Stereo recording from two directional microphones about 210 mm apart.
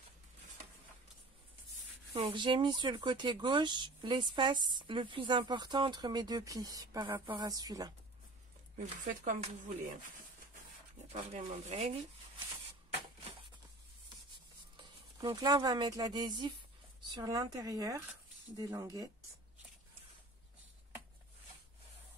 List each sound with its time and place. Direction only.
2.1 s speech: 25° right (ahead or behind)
8.7 s speech: 35° right (ahead or behind)
11.1 s speech: 35° right (ahead or behind)
15.1 s speech: 20° right (ahead or behind)